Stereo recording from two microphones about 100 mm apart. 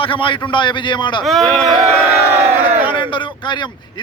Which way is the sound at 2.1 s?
20° right (ahead or behind).